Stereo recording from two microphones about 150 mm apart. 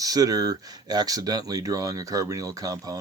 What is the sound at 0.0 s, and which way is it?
Speech, 25° right (ahead or behind).